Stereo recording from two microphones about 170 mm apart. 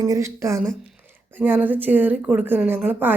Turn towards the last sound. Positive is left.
turn(degrees=-10)  # may be behind; listen again after turning